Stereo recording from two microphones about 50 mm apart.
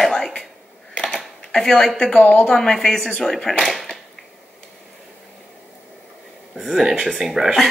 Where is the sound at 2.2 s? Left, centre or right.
Left.